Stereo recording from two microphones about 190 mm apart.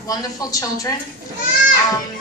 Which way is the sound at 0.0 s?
20° left (ahead or behind).